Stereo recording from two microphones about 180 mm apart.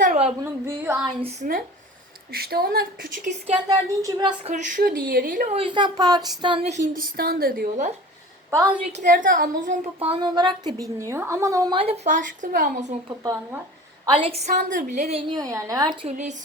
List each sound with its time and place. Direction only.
0.0 s a sound: 45° right (ahead or behind)
0.4 s a woman's voice: 15° right (ahead or behind)
1.2 s a woman's voice: 40° right (ahead or behind)
2.3 s speech: 60° right (ahead or behind)
3.7 s a woman's voice: 25° right (ahead or behind)
4.5 s a woman's voice: 50° right (ahead or behind)
5.5 s a woman's voice: 25° right (ahead or behind); by 7.9 s 55° right (ahead or behind)
8.4 s a woman's voice: 15° right (ahead or behind)
8.9 s a woman's voice: 50° right (ahead or behind)
10.0 s a woman's voice: 30° right (ahead or behind)
12.0 s a woman's voice: 45° right (ahead or behind)
14.0 s a woman's voice: 30° right (ahead or behind)
15.3 s a woman's voice: 20° right (ahead or behind)